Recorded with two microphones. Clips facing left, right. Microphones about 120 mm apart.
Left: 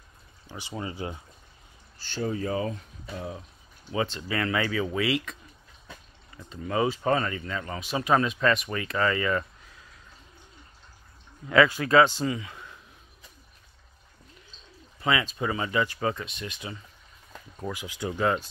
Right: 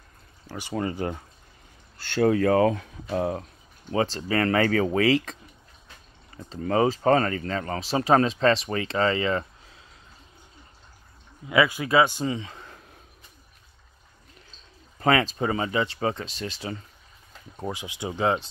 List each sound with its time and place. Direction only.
0.6 s speech: 55° right (ahead or behind)
2.1 s speech: 70° right (ahead or behind)
3.9 s speech: 35° right (ahead or behind)
6.7 s speech: 40° right (ahead or behind)
11.4 s speech: 15° right (ahead or behind)
12.3 s speech: 30° right (ahead or behind)
15.0 s speech: 45° right (ahead or behind); by 18.5 s 20° right (ahead or behind)